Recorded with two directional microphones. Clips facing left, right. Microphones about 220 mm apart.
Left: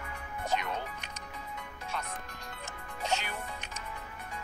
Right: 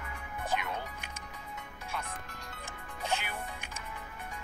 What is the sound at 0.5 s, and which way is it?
Music, 10° right (ahead or behind).